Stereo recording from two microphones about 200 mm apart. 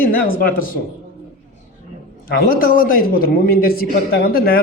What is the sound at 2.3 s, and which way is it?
A man's voice, 45° left (ahead or behind).